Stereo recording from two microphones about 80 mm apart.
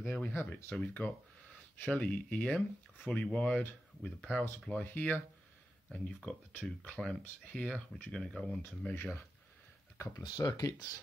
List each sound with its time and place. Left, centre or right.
0.1 s speech: left
1.8 s speech: centre
8.6 s speech: left
9.9 s speech: left
10.2 s speech: left